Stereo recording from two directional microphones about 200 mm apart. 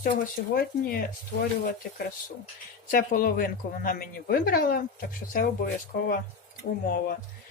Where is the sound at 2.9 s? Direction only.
45° left (ahead or behind).